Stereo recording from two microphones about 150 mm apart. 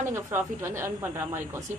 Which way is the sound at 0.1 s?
15° right (ahead or behind).